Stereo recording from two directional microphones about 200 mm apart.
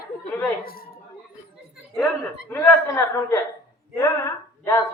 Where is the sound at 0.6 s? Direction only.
45° left (ahead or behind).